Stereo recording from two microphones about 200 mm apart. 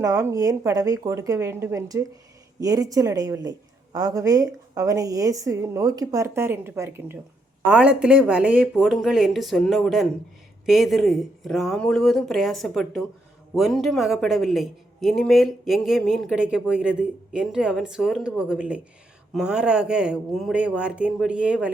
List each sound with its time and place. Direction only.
0.0 s a woman's voice: 15° right (ahead or behind)